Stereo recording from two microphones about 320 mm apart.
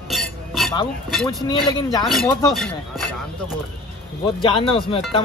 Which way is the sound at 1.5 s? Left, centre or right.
Centre.